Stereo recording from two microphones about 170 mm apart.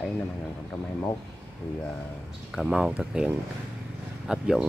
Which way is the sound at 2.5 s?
Centre (ahead or behind).